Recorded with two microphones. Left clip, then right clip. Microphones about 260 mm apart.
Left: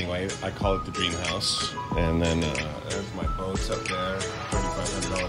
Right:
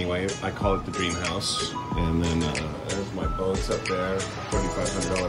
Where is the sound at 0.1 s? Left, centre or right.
Left.